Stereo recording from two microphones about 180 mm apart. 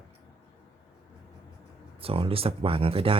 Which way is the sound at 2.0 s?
30° right (ahead or behind).